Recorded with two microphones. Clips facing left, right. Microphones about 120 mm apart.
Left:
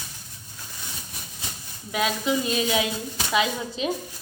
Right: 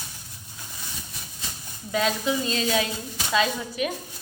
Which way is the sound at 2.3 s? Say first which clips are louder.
Left 1 dB; 15° left (ahead or behind).